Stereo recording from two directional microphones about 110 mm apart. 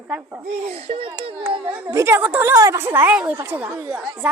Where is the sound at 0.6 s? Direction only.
65° right (ahead or behind).